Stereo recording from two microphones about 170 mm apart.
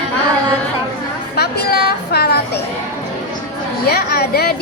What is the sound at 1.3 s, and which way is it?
A woman's voice, 70° left (ahead or behind).